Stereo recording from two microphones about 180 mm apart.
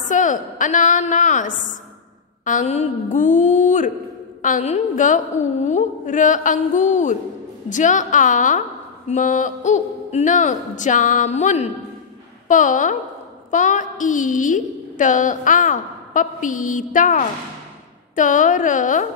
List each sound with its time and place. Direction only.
0.0 s a woman's voice: 45° left (ahead or behind)